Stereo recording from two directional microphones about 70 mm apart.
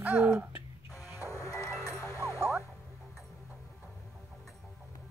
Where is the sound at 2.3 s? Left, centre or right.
Right.